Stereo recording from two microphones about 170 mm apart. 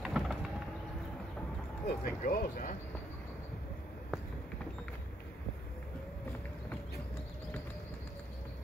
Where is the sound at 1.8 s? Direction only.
60° left (ahead or behind).